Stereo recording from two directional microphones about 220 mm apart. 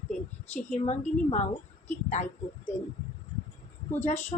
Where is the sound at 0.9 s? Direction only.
30° left (ahead or behind).